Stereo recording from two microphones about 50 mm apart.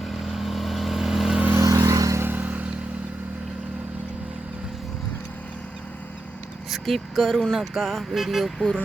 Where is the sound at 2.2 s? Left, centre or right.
Right.